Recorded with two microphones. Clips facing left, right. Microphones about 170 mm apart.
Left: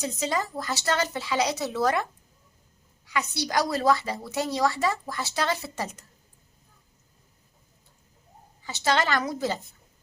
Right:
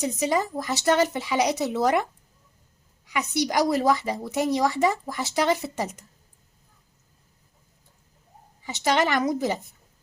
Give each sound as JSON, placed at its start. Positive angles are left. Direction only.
{"t": 0.0, "sound": "a woman's voice", "side_deg": -15}
{"t": 3.1, "sound": "a woman's voice", "side_deg": -20}
{"t": 8.6, "sound": "a woman's voice", "side_deg": -15}